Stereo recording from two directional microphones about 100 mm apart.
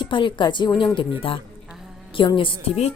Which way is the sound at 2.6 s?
90° left.